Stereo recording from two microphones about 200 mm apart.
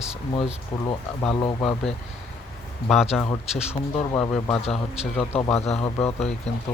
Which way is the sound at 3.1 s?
Centre (ahead or behind).